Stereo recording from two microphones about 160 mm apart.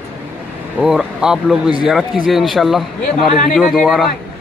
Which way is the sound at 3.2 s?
55° left (ahead or behind).